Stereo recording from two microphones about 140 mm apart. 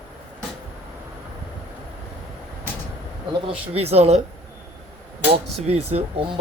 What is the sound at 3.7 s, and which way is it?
Speech, 45° right (ahead or behind).